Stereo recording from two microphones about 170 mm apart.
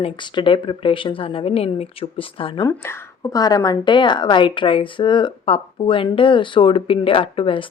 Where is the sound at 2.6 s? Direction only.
20° left (ahead or behind).